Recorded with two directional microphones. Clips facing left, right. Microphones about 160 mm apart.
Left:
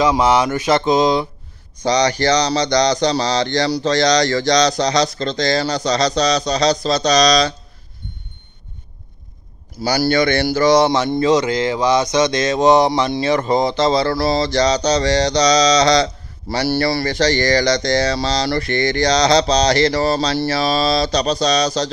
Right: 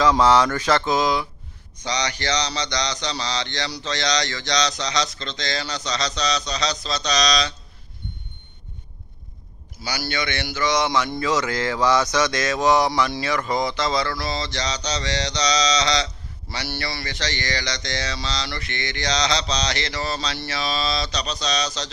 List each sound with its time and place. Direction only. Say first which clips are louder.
0.0 s mantra: left 2 dB; 15° left (ahead or behind)
1.8 s speech: left 10 dB; 35° left (ahead or behind)
9.8 s speech: left 12 dB; 40° left (ahead or behind)